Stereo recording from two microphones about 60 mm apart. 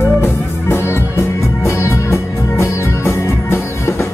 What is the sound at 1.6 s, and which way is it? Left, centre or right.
Music, left.